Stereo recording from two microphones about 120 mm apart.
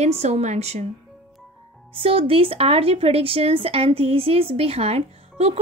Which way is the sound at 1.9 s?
50° right (ahead or behind).